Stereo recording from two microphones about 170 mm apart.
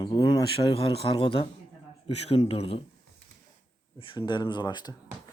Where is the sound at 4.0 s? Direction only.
30° left (ahead or behind).